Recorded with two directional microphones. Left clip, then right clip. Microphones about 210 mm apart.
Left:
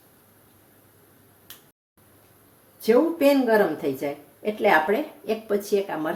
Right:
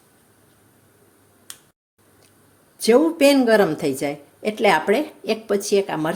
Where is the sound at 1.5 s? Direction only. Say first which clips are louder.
Right 5 dB; 40° right (ahead or behind).